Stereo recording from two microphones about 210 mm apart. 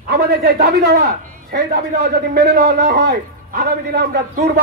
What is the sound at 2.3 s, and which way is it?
A man's voice, 45° right (ahead or behind).